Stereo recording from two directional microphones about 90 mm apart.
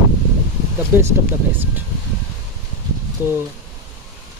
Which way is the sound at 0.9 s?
20° right (ahead or behind).